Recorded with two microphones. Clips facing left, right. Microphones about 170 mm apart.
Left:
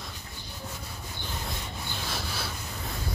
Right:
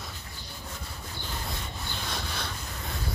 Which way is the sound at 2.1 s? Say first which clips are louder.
Even; 5° left (ahead or behind).